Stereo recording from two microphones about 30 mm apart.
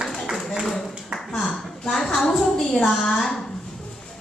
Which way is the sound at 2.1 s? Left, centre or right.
Centre.